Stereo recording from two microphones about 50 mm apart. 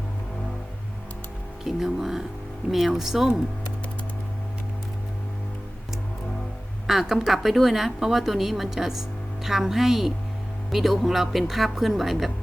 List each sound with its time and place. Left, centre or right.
1.6 s speech: centre
6.8 s speech: centre